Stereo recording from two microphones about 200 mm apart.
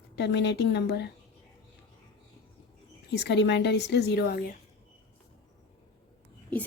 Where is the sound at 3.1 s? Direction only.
60° left (ahead or behind).